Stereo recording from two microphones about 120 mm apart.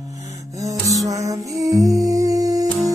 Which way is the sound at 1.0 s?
25° right (ahead or behind).